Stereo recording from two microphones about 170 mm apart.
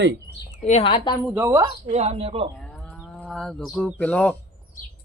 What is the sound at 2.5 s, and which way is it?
Moo, 5° left (ahead or behind).